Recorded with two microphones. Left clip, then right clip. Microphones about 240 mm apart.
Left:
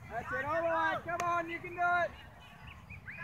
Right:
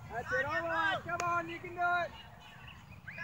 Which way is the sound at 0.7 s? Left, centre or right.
Right.